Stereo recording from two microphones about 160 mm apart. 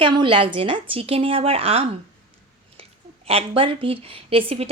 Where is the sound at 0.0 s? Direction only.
30° right (ahead or behind).